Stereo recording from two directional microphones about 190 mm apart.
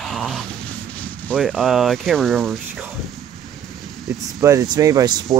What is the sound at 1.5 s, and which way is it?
Speech, 5° right (ahead or behind).